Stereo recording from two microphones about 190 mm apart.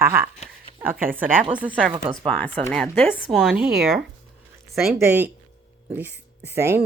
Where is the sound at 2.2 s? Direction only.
5° left (ahead or behind).